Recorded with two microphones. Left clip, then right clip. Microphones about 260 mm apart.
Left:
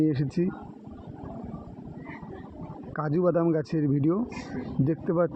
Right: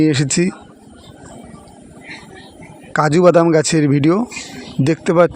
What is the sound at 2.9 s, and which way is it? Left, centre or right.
Speech, right.